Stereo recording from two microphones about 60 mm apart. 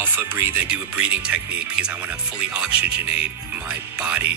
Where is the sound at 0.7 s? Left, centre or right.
Centre.